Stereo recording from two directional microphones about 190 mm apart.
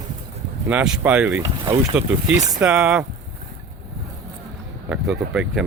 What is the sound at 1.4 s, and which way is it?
Speech, 15° right (ahead or behind).